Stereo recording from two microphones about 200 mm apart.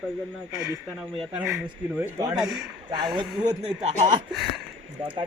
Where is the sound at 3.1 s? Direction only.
20° right (ahead or behind).